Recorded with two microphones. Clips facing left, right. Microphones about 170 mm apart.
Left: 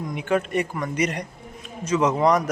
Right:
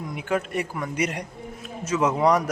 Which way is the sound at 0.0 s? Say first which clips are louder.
Left 3 dB; 5° right (ahead or behind).